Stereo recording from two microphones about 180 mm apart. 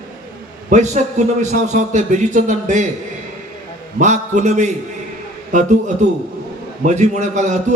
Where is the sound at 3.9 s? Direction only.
40° right (ahead or behind).